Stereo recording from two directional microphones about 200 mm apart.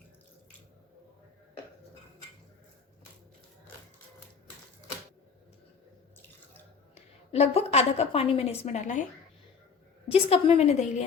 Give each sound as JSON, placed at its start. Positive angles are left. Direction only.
{"t": 6.9, "sound": "a woman's voice", "side_deg": 30}
{"t": 10.1, "sound": "a woman's voice", "side_deg": 30}